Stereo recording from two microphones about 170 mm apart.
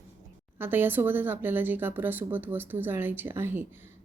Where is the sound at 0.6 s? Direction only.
10° right (ahead or behind).